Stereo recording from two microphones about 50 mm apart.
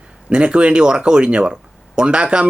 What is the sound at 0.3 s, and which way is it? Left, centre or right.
Speech, right.